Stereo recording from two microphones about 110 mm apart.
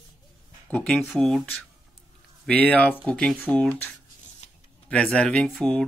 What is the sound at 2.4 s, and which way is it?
Speech, 10° left (ahead or behind).